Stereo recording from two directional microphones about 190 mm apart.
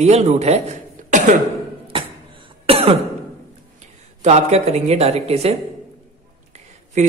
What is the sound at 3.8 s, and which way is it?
Speech, 35° right (ahead or behind).